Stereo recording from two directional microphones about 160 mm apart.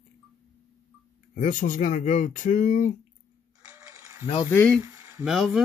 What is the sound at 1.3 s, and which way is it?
Speech, 55° left (ahead or behind).